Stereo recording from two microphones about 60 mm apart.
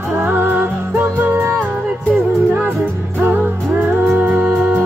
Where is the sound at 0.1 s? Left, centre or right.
Right.